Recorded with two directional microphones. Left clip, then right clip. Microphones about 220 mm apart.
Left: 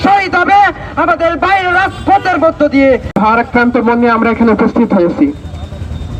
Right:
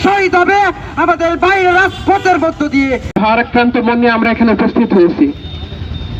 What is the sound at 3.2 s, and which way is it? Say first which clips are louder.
Speech: right 1 dB; 60° left (ahead or behind).